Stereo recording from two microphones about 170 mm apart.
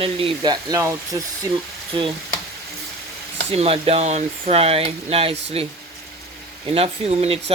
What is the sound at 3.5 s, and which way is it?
Speech, 35° right (ahead or behind).